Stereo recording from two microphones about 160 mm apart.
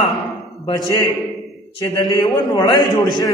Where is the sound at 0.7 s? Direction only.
25° left (ahead or behind).